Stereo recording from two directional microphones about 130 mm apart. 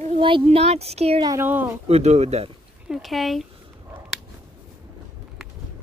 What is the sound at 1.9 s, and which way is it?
Speech, 60° right (ahead or behind).